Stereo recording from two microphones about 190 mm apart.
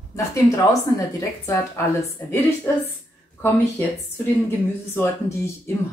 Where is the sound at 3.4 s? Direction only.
10° left (ahead or behind).